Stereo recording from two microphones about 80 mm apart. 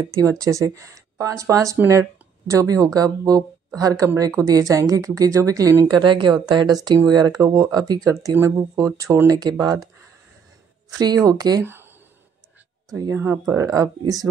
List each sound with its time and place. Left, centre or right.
0.1 s speech: right
7.1 s speech: right
9.3 s speech: right
10.9 s speech: right
11.6 s a sound: right
13.1 s speech: right
13.6 s speech: right